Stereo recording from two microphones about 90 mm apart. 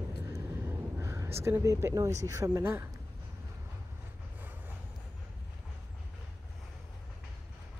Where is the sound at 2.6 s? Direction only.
25° right (ahead or behind).